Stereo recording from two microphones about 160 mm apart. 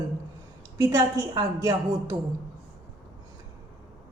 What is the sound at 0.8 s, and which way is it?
Speech, 20° right (ahead or behind).